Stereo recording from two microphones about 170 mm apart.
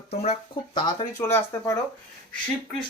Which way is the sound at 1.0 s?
15° left (ahead or behind).